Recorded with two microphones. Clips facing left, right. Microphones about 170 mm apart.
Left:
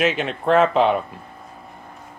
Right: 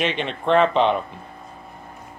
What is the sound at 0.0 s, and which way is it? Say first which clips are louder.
Speech: left 3 dB; 5° left (ahead or behind).